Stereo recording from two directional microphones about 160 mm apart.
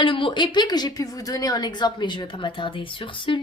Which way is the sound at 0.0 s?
30° left (ahead or behind).